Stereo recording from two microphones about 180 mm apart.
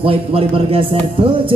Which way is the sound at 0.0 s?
30° right (ahead or behind).